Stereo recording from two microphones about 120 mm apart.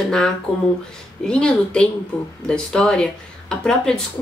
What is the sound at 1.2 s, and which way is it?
Speech, 5° left (ahead or behind).